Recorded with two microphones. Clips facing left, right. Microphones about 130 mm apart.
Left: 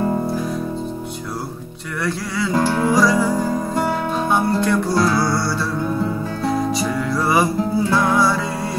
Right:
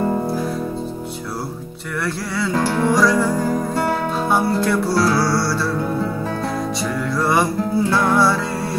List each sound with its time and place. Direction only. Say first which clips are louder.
2.0 s music: left 1 dB; centre (ahead or behind)
6.8 s music: left 1 dB; centre (ahead or behind)